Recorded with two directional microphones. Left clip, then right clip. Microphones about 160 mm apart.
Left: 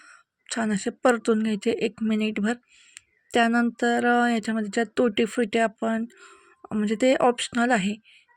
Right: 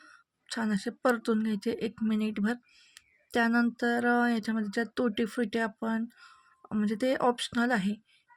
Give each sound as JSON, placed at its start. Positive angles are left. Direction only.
{"t": 0.0, "sound": "speech", "side_deg": 20}